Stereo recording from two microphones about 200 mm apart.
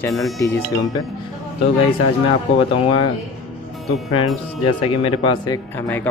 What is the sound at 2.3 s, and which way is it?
Speech, 25° left (ahead or behind).